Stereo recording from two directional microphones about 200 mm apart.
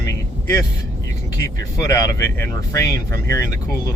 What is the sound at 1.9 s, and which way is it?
Speech, 15° left (ahead or behind).